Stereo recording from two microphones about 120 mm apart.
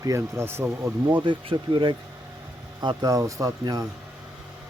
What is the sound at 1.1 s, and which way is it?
Speech, 40° right (ahead or behind).